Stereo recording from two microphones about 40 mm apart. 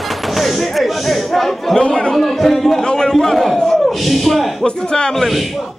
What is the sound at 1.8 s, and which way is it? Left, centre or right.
Speech, centre.